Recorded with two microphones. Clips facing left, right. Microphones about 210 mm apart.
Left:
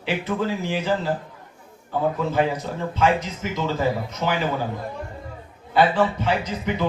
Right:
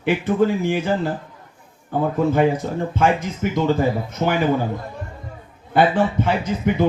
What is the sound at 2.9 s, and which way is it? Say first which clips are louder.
Speech: even; 50° right (ahead or behind).